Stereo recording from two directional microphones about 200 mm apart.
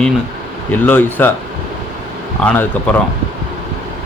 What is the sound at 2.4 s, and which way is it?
Speech, 10° left (ahead or behind).